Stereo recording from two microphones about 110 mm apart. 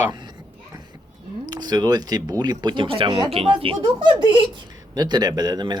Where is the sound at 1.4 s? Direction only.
40° right (ahead or behind).